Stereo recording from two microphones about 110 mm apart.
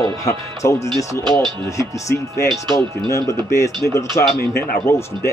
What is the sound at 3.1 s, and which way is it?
Speech, 25° left (ahead or behind).